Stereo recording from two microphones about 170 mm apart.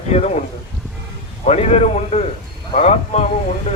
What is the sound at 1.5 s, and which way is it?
A man's voice, 40° left (ahead or behind).